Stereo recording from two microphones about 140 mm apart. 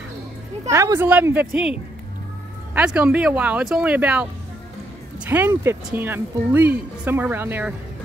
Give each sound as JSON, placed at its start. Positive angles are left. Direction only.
{"t": 0.7, "sound": "speech", "side_deg": -20}
{"t": 5.3, "sound": "speech", "side_deg": -15}